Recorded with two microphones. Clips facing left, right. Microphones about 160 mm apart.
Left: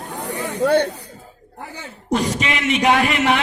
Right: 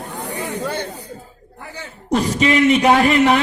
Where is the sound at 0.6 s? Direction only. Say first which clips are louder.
Left 12 dB; 70° left (ahead or behind).